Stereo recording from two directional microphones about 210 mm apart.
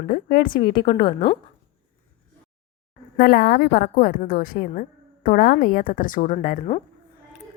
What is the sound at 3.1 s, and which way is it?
A woman's voice, 45° left (ahead or behind).